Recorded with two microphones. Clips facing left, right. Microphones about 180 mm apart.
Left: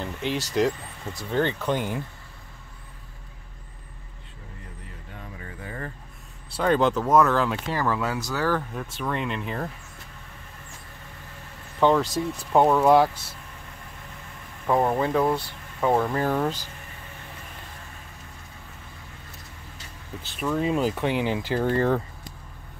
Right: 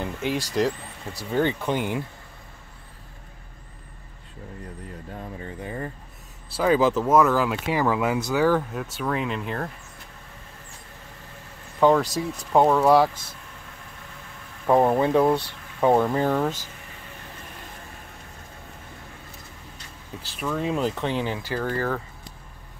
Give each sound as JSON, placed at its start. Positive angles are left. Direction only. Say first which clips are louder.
{"t": 0.0, "sound": "speech", "louder": "right 2 dB", "side_deg": -10}
{"t": 5.6, "sound": "a sound", "louder": "right 3 dB", "side_deg": -20}
{"t": 6.5, "sound": "speech", "louder": "right 2 dB", "side_deg": -5}
{"t": 11.8, "sound": "speech", "louder": "right 1 dB", "side_deg": 0}
{"t": 14.7, "sound": "speech", "louder": "right 3 dB", "side_deg": -20}
{"t": 16.3, "sound": "speech", "louder": "right 1 dB", "side_deg": -5}
{"t": 20.2, "sound": "speech", "louder": "left 2 dB", "side_deg": 0}
{"t": 21.0, "sound": "speech", "louder": "left 2 dB", "side_deg": 15}